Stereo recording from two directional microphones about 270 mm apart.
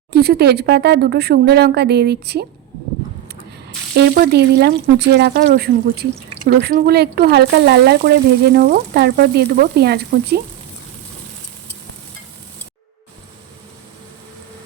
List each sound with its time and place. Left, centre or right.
0.1 s speech: right
3.9 s speech: right